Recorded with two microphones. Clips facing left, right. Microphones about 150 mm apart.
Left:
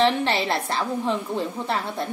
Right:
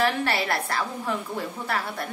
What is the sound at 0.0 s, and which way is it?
A woman's voice, 20° left (ahead or behind).